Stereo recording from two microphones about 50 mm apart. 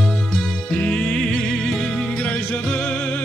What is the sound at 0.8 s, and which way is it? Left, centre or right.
Music, left.